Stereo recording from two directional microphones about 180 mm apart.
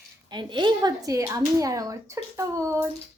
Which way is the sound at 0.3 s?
25° right (ahead or behind).